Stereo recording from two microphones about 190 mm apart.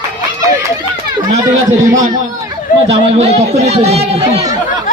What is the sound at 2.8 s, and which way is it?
A man's voice, 35° right (ahead or behind).